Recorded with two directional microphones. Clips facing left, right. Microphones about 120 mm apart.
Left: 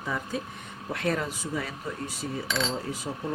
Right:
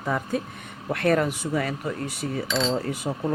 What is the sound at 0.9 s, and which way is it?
Coin, 60° right (ahead or behind).